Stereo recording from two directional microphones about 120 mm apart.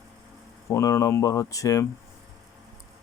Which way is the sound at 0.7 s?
25° left (ahead or behind).